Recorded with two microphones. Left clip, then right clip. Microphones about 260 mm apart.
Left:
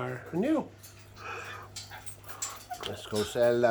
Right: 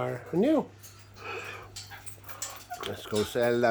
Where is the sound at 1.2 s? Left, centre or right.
Right.